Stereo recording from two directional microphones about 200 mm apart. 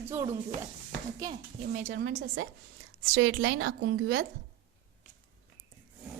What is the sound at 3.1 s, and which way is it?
A woman's voice, 75° right (ahead or behind).